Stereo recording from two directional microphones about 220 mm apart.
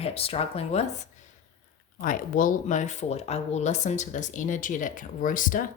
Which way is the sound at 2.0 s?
40° left (ahead or behind).